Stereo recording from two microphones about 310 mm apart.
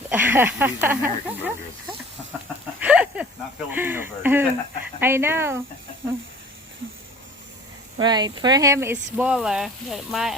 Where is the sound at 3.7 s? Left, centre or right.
Centre.